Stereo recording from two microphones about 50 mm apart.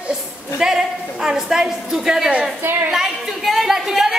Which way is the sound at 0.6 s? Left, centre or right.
Centre.